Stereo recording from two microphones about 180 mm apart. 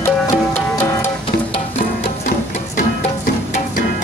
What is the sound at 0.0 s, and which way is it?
Music, 10° left (ahead or behind).